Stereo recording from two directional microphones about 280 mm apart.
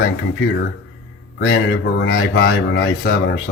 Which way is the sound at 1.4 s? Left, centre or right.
Left.